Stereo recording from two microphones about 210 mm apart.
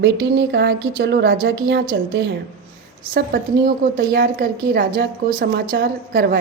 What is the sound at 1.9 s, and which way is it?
Speech, 60° right (ahead or behind).